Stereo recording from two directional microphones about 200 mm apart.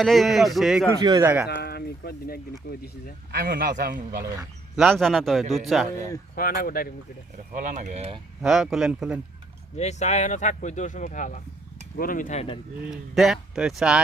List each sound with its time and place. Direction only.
0.0 s a man's voice: centre (ahead or behind)
1.0 s speech: 15° right (ahead or behind)
1.5 s speech: 55° left (ahead or behind)
3.4 s a man's voice: 50° right (ahead or behind)
4.2 s speech: 15° right (ahead or behind)
4.8 s a man's voice: centre (ahead or behind)
6.6 s speech: 45° left (ahead or behind)
7.5 s speech: 40° right (ahead or behind)
8.4 s a man's voice: centre (ahead or behind)
9.7 s speech: 35° left (ahead or behind)
12.9 s a man's voice: centre (ahead or behind)